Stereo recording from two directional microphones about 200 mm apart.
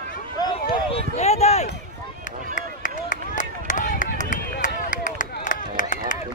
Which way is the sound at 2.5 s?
40° left (ahead or behind).